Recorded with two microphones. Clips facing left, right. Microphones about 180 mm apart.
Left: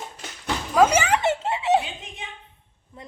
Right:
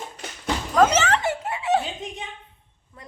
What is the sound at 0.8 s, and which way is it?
Children playing, 10° left (ahead or behind).